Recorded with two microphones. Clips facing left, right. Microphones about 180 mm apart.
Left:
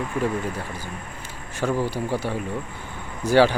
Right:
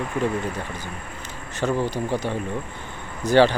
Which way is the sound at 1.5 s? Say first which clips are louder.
Right 1 dB; 10° left (ahead or behind).